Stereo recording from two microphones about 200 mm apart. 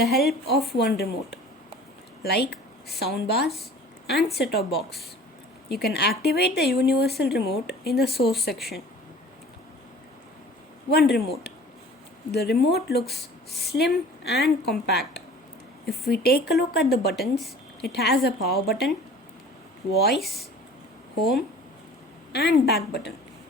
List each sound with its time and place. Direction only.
0.0 s a woman's voice: 50° left (ahead or behind)
5.6 s speech: 55° left (ahead or behind)
10.9 s a woman's voice: 55° left (ahead or behind)
19.9 s speech: 55° left (ahead or behind)
20.1 s speech: centre (ahead or behind)
21.2 s a woman's voice: 50° left (ahead or behind)